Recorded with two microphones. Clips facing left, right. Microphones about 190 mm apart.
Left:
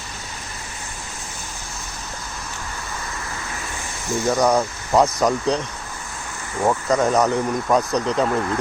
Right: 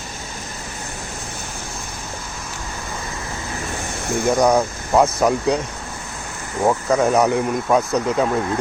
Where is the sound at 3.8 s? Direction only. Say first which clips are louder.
Right 1 dB; 60° right (ahead or behind).